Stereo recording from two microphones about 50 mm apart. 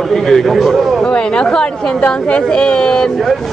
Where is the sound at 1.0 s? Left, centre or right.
Left.